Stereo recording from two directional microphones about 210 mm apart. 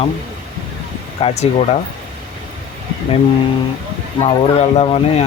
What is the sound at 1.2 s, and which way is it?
Speech, 25° left (ahead or behind).